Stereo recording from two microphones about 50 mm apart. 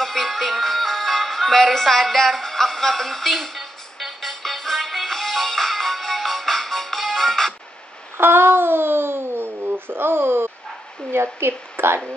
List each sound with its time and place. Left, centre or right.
0.0 s music: centre
8.2 s babbling: right
11.3 s a woman's voice: right